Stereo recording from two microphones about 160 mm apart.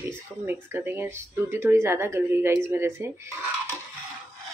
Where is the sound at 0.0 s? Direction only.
15° right (ahead or behind).